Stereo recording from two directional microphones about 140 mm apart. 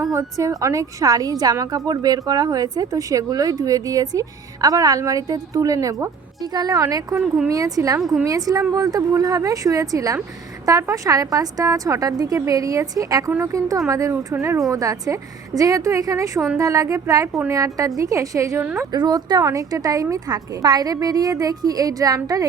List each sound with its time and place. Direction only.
0.0 s a woman's voice: 25° right (ahead or behind)
18.9 s a woman's voice: 30° right (ahead or behind)